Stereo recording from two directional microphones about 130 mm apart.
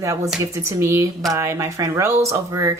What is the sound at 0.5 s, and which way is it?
Speech, 20° right (ahead or behind).